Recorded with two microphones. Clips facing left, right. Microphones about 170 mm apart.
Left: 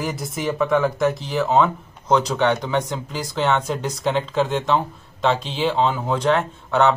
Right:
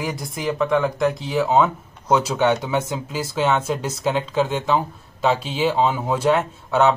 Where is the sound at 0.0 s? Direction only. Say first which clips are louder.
Left 1 dB; centre (ahead or behind).